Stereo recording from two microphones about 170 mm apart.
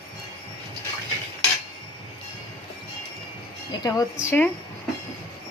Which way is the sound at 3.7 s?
20° left (ahead or behind).